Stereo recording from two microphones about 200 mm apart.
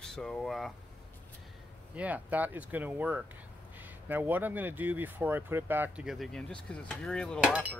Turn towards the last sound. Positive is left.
turn(degrees=-5)  # may be behind; listen again after turning